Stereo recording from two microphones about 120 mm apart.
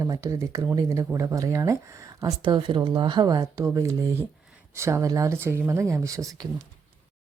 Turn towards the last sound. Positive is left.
turn(degrees=-30)  # may be behind; listen again after turning